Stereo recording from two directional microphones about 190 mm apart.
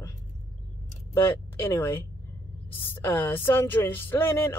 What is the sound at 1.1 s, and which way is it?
Speech, 15° left (ahead or behind).